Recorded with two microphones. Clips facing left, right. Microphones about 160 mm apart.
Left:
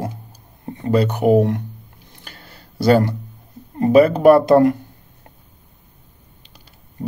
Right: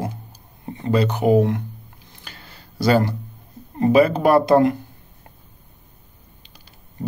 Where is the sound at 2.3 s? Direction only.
55° left (ahead or behind).